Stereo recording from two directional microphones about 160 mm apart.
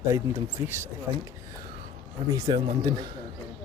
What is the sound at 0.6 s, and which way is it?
Speech, 30° left (ahead or behind).